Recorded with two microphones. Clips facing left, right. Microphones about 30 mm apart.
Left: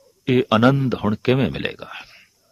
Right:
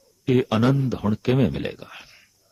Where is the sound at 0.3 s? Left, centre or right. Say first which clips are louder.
Left 2 dB; left.